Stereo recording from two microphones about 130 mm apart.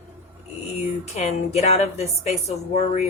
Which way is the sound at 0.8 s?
60° left (ahead or behind).